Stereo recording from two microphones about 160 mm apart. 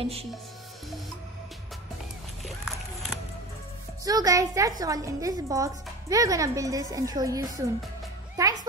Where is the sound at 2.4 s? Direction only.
Centre (ahead or behind).